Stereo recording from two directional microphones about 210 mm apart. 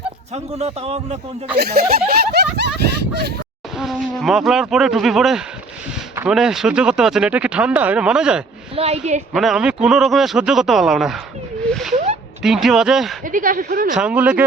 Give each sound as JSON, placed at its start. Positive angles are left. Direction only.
{"t": 0.3, "sound": "a man's voice", "side_deg": -30}
{"t": 1.5, "sound": "speech", "side_deg": -50}
{"t": 3.8, "sound": "speech", "side_deg": 0}
{"t": 8.7, "sound": "a woman's voice", "side_deg": -30}
{"t": 9.3, "sound": "speech", "side_deg": 0}
{"t": 11.7, "sound": "a sound", "side_deg": 0}
{"t": 12.4, "sound": "speech", "side_deg": 0}
{"t": 13.2, "sound": "a man's voice", "side_deg": -40}
{"t": 13.9, "sound": "speech", "side_deg": -5}